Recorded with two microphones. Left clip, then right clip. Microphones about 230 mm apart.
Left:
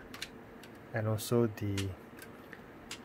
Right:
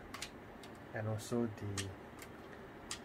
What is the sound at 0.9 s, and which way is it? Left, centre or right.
Speech, left.